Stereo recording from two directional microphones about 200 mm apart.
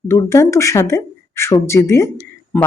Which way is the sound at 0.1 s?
15° left (ahead or behind).